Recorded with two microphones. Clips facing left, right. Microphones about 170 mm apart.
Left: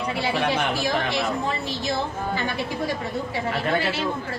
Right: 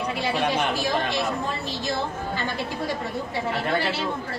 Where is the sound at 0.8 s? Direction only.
10° left (ahead or behind).